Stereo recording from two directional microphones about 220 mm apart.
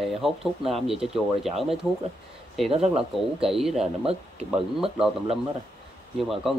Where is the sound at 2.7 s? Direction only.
25° right (ahead or behind).